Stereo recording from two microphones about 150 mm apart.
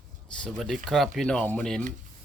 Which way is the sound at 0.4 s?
Centre (ahead or behind).